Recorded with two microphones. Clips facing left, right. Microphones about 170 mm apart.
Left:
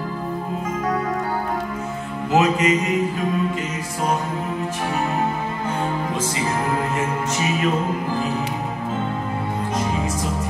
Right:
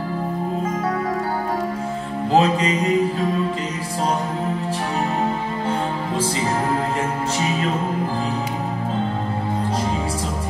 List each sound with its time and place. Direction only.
2.3 s music: 30° right (ahead or behind)